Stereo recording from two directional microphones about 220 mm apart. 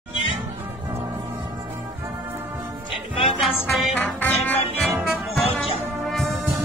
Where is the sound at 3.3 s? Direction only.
Centre (ahead or behind).